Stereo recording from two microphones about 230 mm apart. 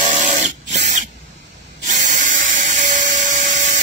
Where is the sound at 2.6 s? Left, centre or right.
Right.